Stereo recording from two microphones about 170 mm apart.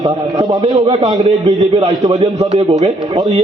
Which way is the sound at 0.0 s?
20° right (ahead or behind).